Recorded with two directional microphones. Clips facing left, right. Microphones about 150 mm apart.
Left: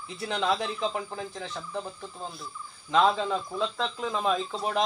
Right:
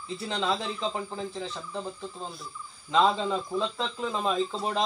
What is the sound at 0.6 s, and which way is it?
Speech, 5° left (ahead or behind).